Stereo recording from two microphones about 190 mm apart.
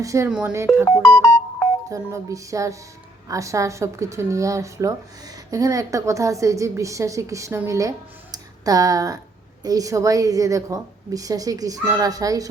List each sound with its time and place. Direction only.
0.0 s a woman's voice: 15° right (ahead or behind)
0.3 s speech: 5° right (ahead or behind)
1.0 s music: 5° left (ahead or behind)
1.9 s a woman's voice: 15° right (ahead or behind)